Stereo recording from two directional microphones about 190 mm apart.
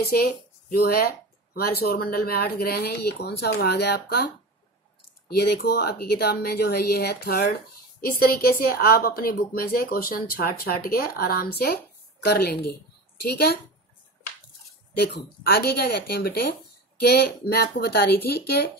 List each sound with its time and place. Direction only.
0.2 s speech: 55° left (ahead or behind)
5.3 s speech: 55° left (ahead or behind)
15.0 s speech: 55° left (ahead or behind)